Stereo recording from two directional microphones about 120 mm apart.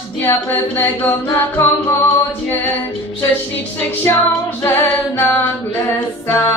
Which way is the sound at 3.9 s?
20° left (ahead or behind).